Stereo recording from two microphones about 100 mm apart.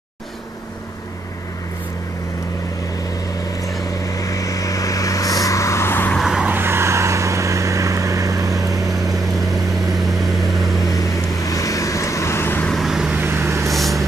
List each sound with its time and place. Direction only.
4.0 s vehicle: 35° left (ahead or behind)
6.1 s vehicle: 5° right (ahead or behind)
6.5 s vehicle: 25° right (ahead or behind)
8.8 s vehicle: centre (ahead or behind)
11.4 s vehicle: 35° left (ahead or behind)
12.6 s vehicle: centre (ahead or behind)
13.1 s vehicle: 20° right (ahead or behind)
13.7 s vehicle: centre (ahead or behind)